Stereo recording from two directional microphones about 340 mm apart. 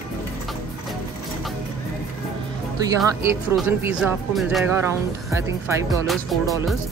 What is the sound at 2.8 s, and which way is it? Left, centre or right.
Speech, centre.